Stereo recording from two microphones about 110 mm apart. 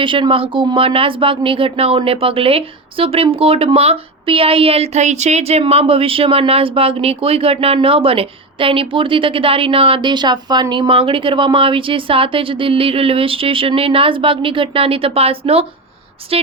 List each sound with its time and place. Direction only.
0.0 s a woman's voice: 50° right (ahead or behind)